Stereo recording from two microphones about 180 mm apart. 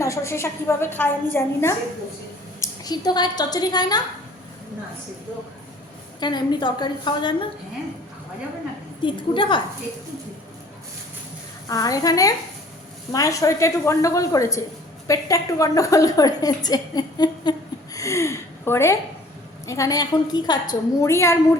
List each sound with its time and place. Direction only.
0.0 s a woman's voice: 15° left (ahead or behind)
6.1 s a woman's voice: 25° left (ahead or behind)
9.0 s a woman's voice: 30° left (ahead or behind)
11.7 s a woman's voice: 20° left (ahead or behind)